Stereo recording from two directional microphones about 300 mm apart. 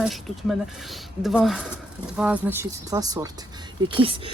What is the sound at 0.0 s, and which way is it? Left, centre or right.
Speech, centre.